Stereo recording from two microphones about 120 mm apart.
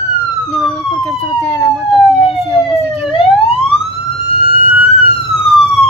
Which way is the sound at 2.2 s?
50° left (ahead or behind).